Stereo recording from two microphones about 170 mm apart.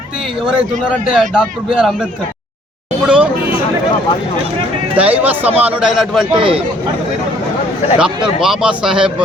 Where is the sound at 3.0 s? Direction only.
5° right (ahead or behind).